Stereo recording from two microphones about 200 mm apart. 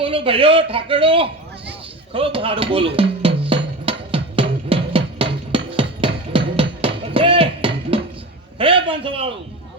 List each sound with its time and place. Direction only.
0.0 s a man's voice: 25° right (ahead or behind)
2.1 s drum: 25° right (ahead or behind)
6.0 s music: 25° right (ahead or behind)
8.5 s a sound: 25° right (ahead or behind)